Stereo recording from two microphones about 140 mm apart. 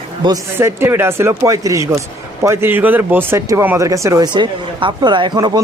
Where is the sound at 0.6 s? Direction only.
15° right (ahead or behind).